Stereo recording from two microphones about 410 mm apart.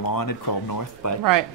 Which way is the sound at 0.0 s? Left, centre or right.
Left.